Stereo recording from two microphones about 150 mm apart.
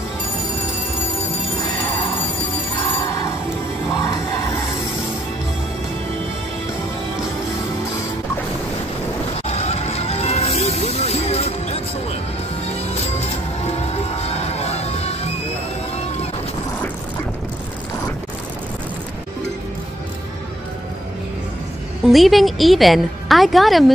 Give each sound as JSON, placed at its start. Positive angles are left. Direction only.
{"t": 3.0, "sound": "music", "side_deg": 20}
{"t": 9.5, "sound": "music", "side_deg": 45}
{"t": 14.2, "sound": "music", "side_deg": 45}
{"t": 22.1, "sound": "a woman's voice", "side_deg": 0}